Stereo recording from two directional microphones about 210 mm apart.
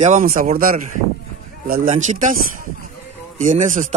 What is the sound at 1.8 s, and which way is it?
Speech, 35° right (ahead or behind).